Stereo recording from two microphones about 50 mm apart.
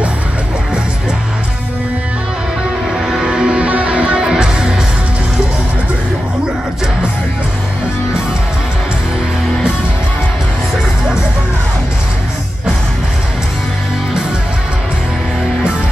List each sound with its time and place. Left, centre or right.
3.1 s music: centre